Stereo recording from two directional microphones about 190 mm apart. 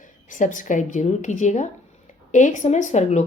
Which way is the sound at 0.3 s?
40° left (ahead or behind).